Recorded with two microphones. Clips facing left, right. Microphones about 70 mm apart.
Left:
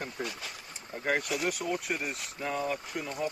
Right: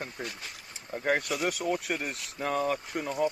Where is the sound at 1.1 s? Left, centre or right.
Right.